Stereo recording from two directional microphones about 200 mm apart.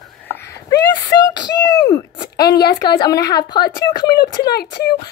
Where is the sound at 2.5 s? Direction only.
55° left (ahead or behind).